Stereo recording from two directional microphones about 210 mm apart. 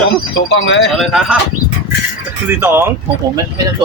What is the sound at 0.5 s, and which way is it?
Speech, 60° left (ahead or behind).